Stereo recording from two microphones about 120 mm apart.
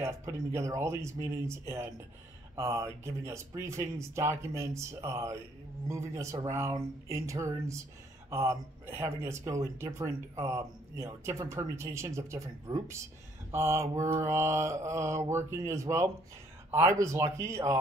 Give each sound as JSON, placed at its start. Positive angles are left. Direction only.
{"t": 0.0, "sound": "speech", "side_deg": -25}